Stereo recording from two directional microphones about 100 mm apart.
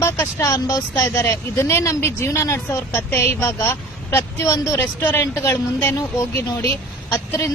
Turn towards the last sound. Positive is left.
turn(degrees=30)  # may be behind; listen again after turning